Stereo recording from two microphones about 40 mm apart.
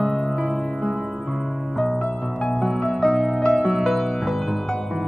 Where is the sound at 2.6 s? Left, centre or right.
Centre.